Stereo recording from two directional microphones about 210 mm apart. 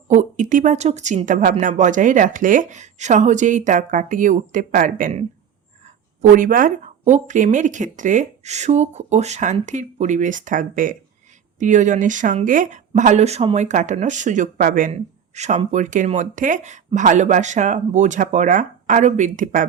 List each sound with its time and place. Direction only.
0.1 s speech: 35° right (ahead or behind)
6.3 s speech: 40° right (ahead or behind)